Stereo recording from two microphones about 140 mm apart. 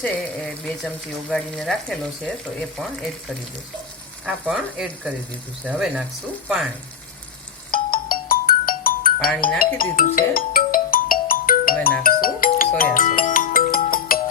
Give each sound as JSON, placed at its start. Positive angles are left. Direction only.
{"t": 0.0, "sound": "speech", "side_deg": 10}
{"t": 1.3, "sound": "frying", "side_deg": 5}
{"t": 4.3, "sound": "speech", "side_deg": -5}
{"t": 7.7, "sound": "ringtone", "side_deg": 90}
{"t": 9.6, "sound": "music", "side_deg": 90}